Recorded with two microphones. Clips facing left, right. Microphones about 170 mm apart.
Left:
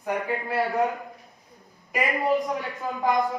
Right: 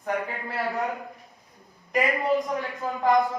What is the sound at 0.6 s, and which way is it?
A man's voice, centre (ahead or behind).